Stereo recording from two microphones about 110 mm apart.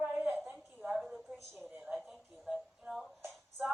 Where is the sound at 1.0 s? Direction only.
Centre (ahead or behind).